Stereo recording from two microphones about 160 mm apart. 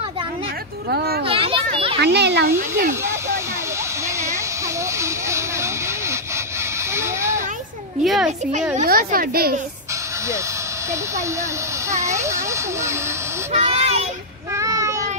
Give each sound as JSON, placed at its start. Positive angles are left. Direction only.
{"t": 0.8, "sound": "a woman's voice", "side_deg": -75}
{"t": 1.2, "sound": "children playing", "side_deg": -35}
{"t": 2.0, "sound": "a child's voice", "side_deg": -90}
{"t": 2.9, "sound": "a sound", "side_deg": -15}
{"t": 4.9, "sound": "a sound", "side_deg": -15}
{"t": 8.0, "sound": "a child's voice", "side_deg": 0}
{"t": 8.8, "sound": "a woman's voice", "side_deg": -65}
{"t": 12.0, "sound": "a sound", "side_deg": -20}
{"t": 13.5, "sound": "speech", "side_deg": -40}
{"t": 14.5, "sound": "child singing", "side_deg": -20}